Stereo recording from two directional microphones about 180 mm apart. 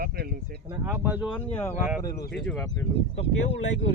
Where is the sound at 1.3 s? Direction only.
10° left (ahead or behind).